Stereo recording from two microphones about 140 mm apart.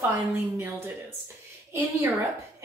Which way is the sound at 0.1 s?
15° right (ahead or behind).